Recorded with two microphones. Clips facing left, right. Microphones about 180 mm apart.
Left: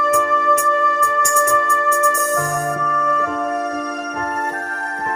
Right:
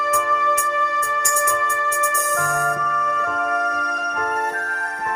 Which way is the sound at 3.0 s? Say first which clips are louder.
Left 5 dB; 50° left (ahead or behind).